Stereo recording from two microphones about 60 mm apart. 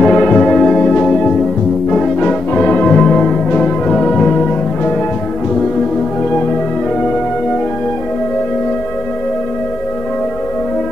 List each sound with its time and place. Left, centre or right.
0.0 s church bell: centre
1.9 s music: centre